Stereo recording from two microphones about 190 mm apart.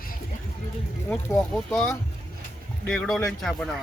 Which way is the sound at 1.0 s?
5° left (ahead or behind).